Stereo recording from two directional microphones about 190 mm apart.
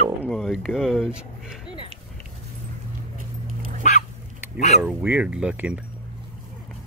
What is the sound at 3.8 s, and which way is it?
Dog, 40° left (ahead or behind).